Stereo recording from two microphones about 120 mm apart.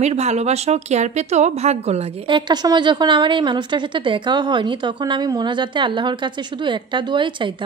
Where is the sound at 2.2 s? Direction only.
40° right (ahead or behind).